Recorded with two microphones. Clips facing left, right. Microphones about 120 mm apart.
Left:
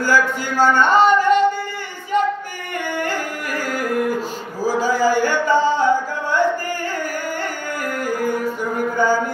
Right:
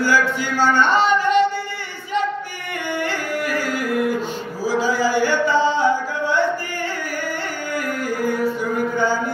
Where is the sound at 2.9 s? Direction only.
45° left (ahead or behind).